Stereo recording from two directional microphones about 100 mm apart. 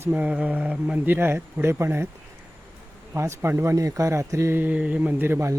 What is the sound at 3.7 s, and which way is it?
Speech, 35° right (ahead or behind).